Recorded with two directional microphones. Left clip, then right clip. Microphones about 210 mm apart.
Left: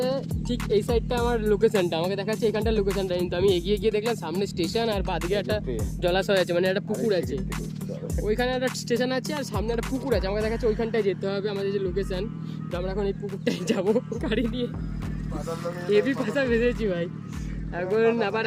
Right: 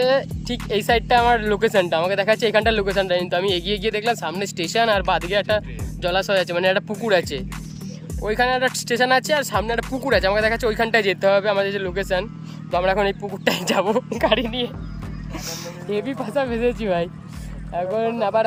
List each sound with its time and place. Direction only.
0.4 s speech: centre (ahead or behind)
10.7 s speech: 45° right (ahead or behind)
11.2 s speech: 5° left (ahead or behind)
15.9 s speech: 5° right (ahead or behind)